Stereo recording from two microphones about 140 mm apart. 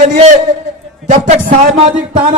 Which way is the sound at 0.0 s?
55° right (ahead or behind).